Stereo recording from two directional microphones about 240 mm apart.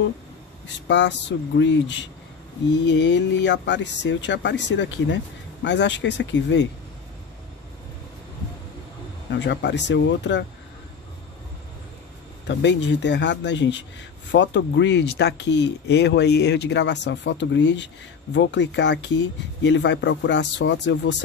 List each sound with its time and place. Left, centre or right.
0.8 s speech: left
9.3 s speech: left
12.4 s speech: left